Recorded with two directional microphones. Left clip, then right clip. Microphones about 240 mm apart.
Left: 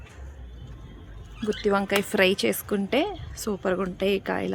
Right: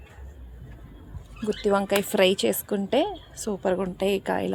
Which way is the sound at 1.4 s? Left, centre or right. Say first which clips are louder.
Right 1 dB; centre.